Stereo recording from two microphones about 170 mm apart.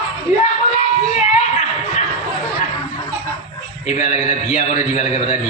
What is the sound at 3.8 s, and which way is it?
Speech, 40° left (ahead or behind).